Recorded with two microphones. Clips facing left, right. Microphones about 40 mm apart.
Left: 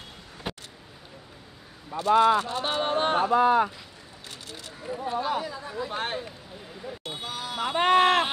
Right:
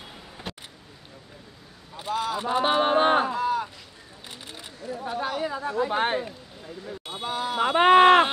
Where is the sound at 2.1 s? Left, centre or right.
Left.